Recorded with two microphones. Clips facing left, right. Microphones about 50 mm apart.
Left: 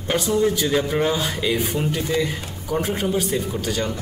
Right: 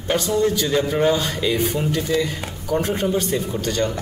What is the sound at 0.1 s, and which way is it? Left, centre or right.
A man's voice, centre.